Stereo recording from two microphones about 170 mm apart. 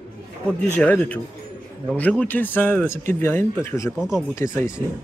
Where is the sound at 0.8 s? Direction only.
10° left (ahead or behind).